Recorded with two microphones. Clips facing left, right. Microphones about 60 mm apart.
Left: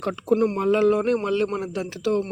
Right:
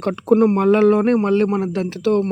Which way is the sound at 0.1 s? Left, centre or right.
Right.